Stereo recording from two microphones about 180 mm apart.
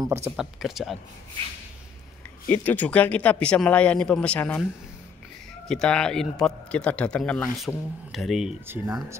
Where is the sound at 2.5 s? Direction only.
10° left (ahead or behind).